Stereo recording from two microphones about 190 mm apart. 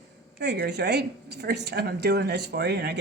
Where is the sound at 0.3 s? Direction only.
55° right (ahead or behind).